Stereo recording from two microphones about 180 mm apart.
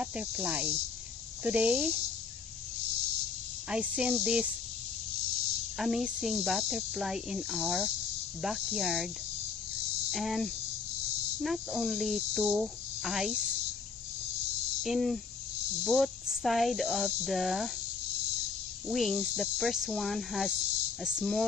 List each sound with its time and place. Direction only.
0.0 s cricket: 5° right (ahead or behind)
3.7 s speech: 5° right (ahead or behind)
5.8 s speech: centre (ahead or behind)
10.1 s speech: centre (ahead or behind)
14.8 s speech: centre (ahead or behind)
18.9 s speech: centre (ahead or behind)